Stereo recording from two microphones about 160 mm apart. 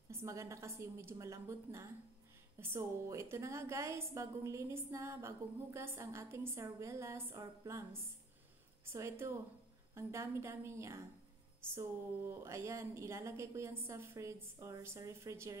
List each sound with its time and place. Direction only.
0.1 s a woman's voice: 20° right (ahead or behind)